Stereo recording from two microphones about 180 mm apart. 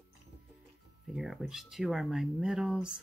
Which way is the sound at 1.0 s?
5° right (ahead or behind).